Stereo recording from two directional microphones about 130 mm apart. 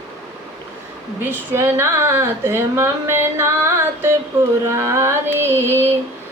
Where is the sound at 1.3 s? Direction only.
15° right (ahead or behind).